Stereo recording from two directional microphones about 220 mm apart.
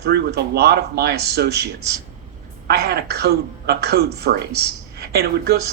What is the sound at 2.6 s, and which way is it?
A woman's voice, 45° right (ahead or behind).